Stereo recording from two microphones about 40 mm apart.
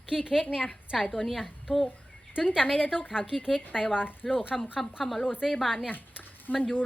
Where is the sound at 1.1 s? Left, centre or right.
Centre.